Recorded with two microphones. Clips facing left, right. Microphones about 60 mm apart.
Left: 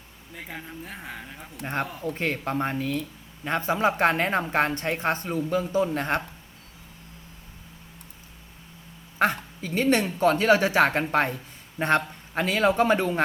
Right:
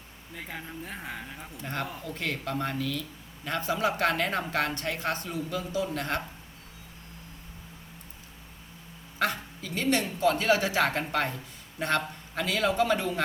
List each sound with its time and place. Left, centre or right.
0.3 s speech: centre
2.0 s speech: left
9.1 s speech: left